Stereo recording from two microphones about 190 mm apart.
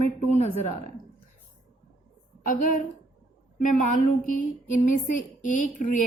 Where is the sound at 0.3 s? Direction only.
35° left (ahead or behind).